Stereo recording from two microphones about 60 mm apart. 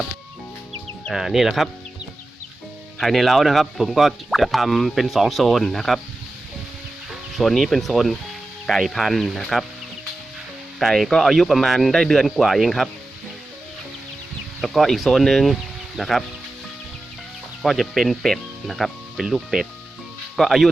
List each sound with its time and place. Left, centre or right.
1.1 s speech: centre
3.0 s speech: centre
7.1 s speech: centre
10.8 s speech: centre
14.6 s speech: centre
17.6 s speech: centre